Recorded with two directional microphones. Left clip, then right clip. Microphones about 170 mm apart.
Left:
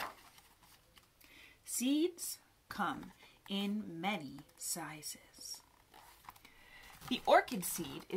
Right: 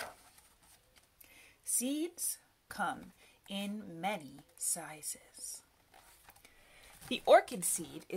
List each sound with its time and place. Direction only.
1.3 s a sound: 45° right (ahead or behind)
2.1 s speech: 35° right (ahead or behind)
7.1 s speech: 50° right (ahead or behind)